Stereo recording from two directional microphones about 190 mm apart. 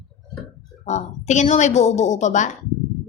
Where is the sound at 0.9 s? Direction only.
40° left (ahead or behind).